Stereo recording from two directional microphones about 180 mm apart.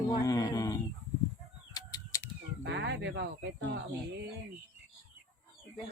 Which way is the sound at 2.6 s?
70° right (ahead or behind).